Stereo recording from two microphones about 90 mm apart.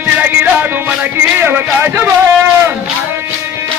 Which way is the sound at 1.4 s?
25° right (ahead or behind).